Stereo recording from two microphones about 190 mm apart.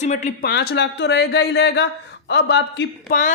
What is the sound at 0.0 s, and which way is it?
Speech, 40° left (ahead or behind).